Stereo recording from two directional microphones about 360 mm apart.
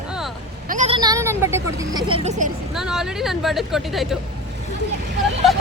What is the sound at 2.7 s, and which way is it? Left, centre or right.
A woman's voice, centre.